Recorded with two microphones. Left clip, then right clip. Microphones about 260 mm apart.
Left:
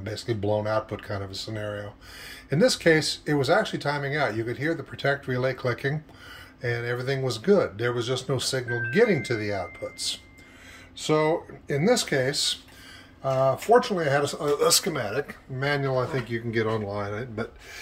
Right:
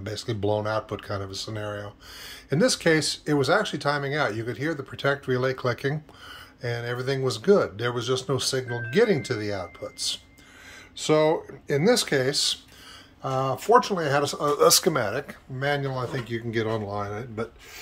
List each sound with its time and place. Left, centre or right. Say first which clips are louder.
0.0 s speech: right 1 dB; centre
11.0 s speech: right 2 dB; centre
14.7 s speech: right 3 dB; centre
15.6 s speech: left 1 dB; centre